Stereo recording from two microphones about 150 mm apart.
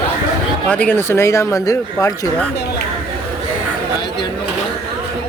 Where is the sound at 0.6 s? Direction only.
10° left (ahead or behind).